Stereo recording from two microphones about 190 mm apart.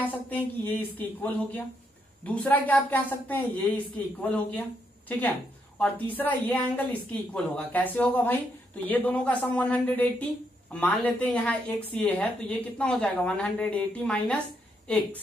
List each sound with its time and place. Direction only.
0.3 s speech: 10° left (ahead or behind)